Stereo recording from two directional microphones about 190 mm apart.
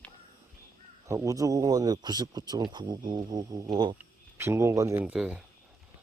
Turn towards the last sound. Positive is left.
turn(degrees=-5)  # may be behind; listen again after turning